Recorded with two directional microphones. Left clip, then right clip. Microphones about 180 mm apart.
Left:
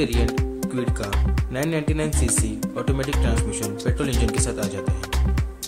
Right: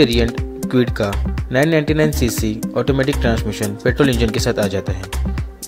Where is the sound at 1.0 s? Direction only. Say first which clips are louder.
Right 7 dB; 30° right (ahead or behind).